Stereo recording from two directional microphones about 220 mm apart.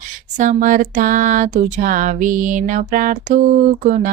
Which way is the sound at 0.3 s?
35° right (ahead or behind).